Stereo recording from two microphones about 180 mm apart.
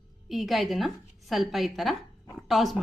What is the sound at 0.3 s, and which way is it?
A woman's voice, centre (ahead or behind).